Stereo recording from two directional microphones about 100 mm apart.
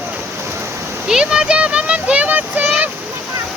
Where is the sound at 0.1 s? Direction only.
25° right (ahead or behind).